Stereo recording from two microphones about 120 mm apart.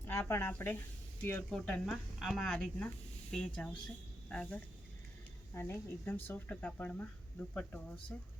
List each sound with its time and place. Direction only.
0.0 s speech: 20° left (ahead or behind)